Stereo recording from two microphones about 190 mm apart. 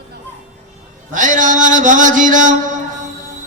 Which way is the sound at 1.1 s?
45° right (ahead or behind).